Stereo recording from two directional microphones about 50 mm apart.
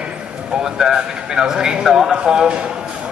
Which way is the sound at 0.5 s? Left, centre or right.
Centre.